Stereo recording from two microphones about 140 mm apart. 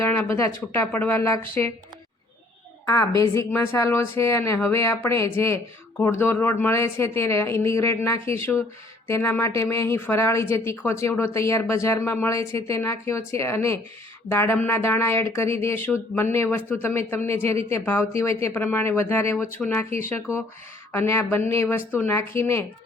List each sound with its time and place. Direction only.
0.3 s speech: 20° left (ahead or behind)
2.8 s a woman's voice: 25° left (ahead or behind)
20.3 s speech: 10° right (ahead or behind)
20.9 s speech: 20° left (ahead or behind)